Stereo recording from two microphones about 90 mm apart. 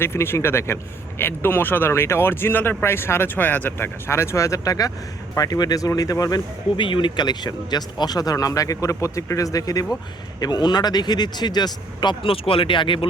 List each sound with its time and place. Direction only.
0.0 s speech: 30° left (ahead or behind)
6.7 s speech: 65° left (ahead or behind); by 9.8 s 40° left (ahead or behind)
10.4 s speech: 50° left (ahead or behind)